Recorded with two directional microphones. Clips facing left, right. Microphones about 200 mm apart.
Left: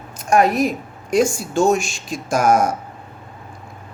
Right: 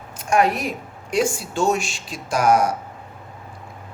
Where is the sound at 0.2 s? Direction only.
40° left (ahead or behind).